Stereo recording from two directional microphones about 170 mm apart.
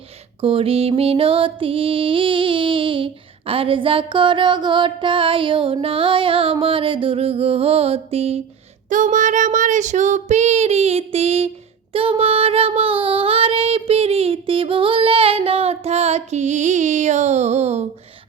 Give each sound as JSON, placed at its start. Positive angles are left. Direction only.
{"t": 0.4, "sound": "music", "side_deg": -35}
{"t": 8.9, "sound": "child singing", "side_deg": -50}
{"t": 11.9, "sound": "music", "side_deg": -35}